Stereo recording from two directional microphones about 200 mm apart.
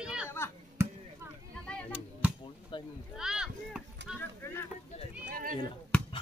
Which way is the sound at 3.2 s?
5° right (ahead or behind).